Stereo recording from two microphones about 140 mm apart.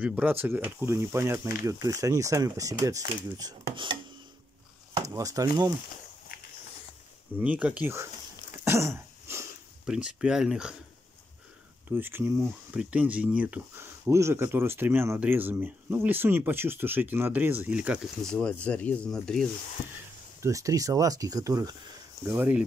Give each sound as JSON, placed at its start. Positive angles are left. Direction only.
{"t": 0.0, "sound": "speech", "side_deg": -10}
{"t": 3.6, "sound": "speech", "side_deg": -35}
{"t": 5.1, "sound": "speech", "side_deg": -25}
{"t": 7.3, "sound": "speech", "side_deg": -10}
{"t": 8.6, "sound": "cough", "side_deg": -20}
{"t": 9.8, "sound": "speech", "side_deg": -5}
{"t": 11.9, "sound": "speech", "side_deg": -15}
{"t": 18.2, "sound": "speech", "side_deg": 5}
{"t": 20.4, "sound": "speech", "side_deg": -20}